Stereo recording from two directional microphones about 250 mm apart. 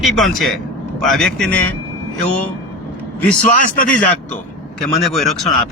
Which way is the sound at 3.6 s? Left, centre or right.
Left.